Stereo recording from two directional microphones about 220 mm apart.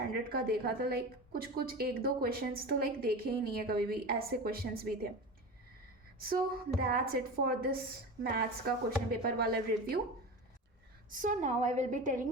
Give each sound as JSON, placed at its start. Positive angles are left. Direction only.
{"t": 0.1, "sound": "a woman's voice", "side_deg": -45}
{"t": 6.1, "sound": "a woman's voice", "side_deg": -40}
{"t": 11.2, "sound": "a woman's voice", "side_deg": -35}